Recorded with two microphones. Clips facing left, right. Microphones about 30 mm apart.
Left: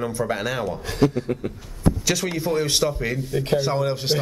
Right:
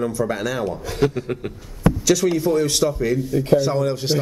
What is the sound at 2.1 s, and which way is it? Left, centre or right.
A man's voice, left.